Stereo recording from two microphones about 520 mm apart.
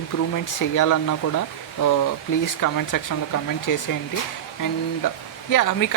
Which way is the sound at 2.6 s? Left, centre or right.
Left.